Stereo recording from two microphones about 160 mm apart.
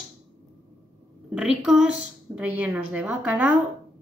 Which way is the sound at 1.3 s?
5° right (ahead or behind).